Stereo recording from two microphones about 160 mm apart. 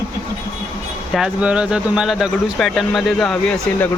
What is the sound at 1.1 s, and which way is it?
Speech, 5° right (ahead or behind).